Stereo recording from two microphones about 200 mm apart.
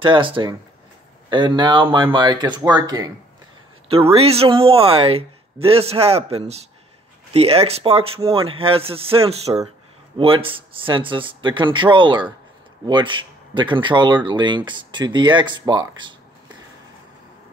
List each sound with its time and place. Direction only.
0.0 s speech: 25° right (ahead or behind)